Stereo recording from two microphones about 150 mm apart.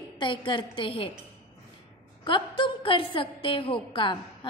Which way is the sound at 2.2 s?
35° left (ahead or behind).